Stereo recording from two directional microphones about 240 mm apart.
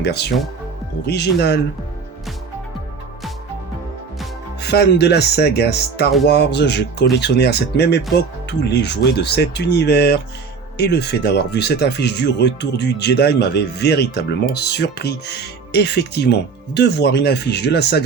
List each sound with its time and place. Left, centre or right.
0.0 s speech: left
4.6 s speech: left